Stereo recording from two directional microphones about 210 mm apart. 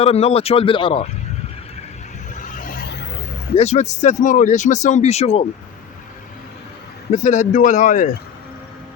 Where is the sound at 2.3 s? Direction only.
40° left (ahead or behind); by 3.3 s 55° left (ahead or behind).